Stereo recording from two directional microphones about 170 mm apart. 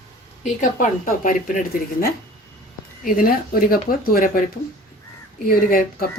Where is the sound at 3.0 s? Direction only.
60° left (ahead or behind).